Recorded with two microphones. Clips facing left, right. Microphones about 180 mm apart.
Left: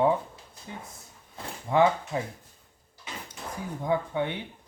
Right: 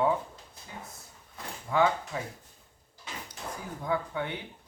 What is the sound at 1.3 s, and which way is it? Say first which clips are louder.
Speech: left 4 dB; 25° left (ahead or behind).